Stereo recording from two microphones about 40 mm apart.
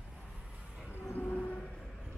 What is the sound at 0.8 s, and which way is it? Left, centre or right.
Train, left.